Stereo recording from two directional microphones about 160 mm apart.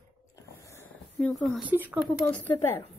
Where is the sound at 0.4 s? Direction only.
20° left (ahead or behind).